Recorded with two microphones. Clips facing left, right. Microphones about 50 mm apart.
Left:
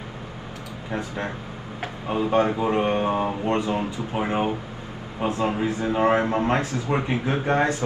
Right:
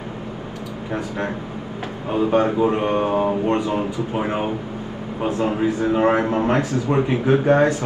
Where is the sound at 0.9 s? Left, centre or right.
Right.